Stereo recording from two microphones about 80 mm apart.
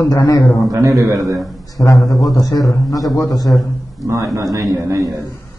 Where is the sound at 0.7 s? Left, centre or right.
Right.